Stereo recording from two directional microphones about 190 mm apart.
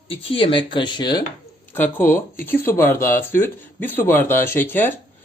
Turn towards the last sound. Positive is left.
turn(degrees=10)  # may be behind; listen again after turning